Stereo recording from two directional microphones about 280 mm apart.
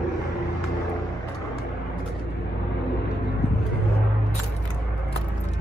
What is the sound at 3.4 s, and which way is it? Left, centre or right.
Vehicle, left.